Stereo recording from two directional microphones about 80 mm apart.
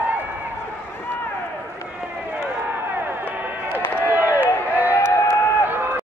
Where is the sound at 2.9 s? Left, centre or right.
Right.